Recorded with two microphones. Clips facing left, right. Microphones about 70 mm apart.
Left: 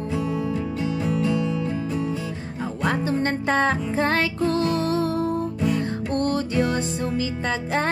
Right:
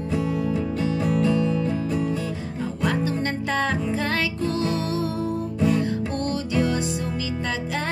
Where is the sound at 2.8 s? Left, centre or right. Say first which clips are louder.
Left 2 dB; left.